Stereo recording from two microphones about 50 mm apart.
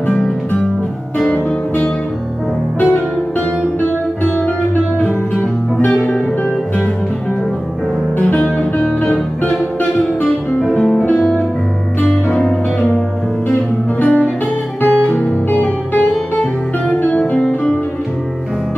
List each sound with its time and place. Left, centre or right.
5.0 s music: left
8.2 s music: left
11.1 s music: centre
14.0 s music: left
17.1 s music: left